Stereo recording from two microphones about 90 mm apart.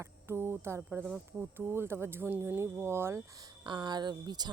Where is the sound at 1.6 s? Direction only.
25° right (ahead or behind).